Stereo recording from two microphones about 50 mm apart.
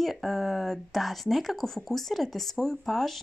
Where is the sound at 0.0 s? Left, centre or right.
Centre.